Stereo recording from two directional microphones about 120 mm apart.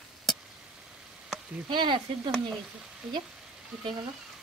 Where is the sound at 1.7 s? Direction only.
40° right (ahead or behind).